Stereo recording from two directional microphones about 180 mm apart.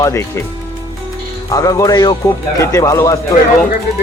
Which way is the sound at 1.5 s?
20° left (ahead or behind).